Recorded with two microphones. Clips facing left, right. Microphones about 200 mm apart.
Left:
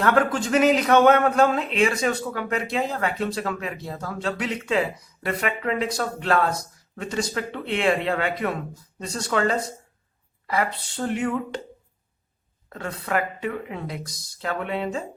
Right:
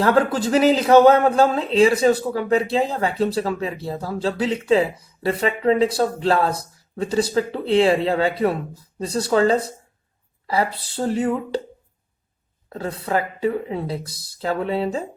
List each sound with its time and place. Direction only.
0.0 s speech: 30° right (ahead or behind)
12.7 s speech: 30° right (ahead or behind)